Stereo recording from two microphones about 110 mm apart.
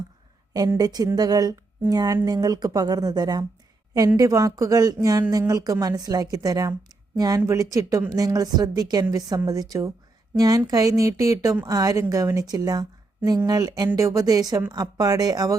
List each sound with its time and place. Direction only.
0.8 s a woman's voice: 35° right (ahead or behind)